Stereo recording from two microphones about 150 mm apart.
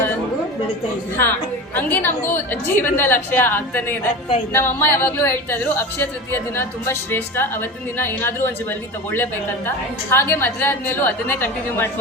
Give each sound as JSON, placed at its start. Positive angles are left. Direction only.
{"t": 1.1, "sound": "speech", "side_deg": 15}